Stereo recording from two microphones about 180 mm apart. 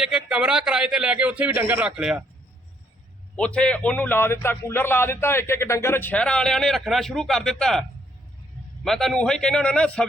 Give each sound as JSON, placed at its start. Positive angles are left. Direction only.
{"t": 0.3, "sound": "a man's voice", "side_deg": -5}
{"t": 3.3, "sound": "a man's voice", "side_deg": 5}